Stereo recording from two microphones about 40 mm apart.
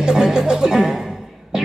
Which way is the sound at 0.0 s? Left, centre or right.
Centre.